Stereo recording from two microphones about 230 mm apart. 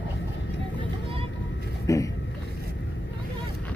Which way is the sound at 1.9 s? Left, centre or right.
Centre.